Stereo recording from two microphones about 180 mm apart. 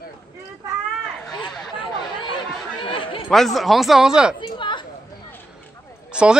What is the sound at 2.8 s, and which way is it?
Chatter, 30° left (ahead or behind).